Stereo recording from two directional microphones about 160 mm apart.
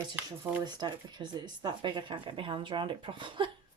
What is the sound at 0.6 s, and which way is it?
Speech, 25° right (ahead or behind).